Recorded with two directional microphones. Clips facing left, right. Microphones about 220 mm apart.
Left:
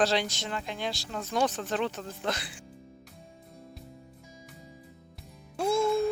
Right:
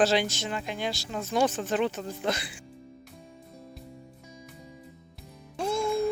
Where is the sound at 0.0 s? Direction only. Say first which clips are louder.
Right 3 dB; 5° right (ahead or behind).